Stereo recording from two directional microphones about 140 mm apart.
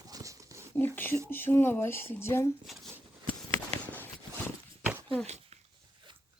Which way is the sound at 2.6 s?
Centre (ahead or behind).